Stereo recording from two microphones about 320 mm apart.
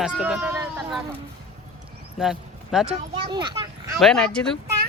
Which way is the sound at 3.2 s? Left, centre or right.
Centre.